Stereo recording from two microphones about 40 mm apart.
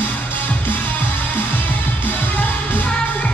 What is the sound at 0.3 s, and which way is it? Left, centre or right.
Music, left.